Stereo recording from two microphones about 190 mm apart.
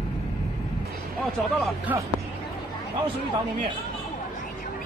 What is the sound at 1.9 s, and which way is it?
Speech, 10° right (ahead or behind).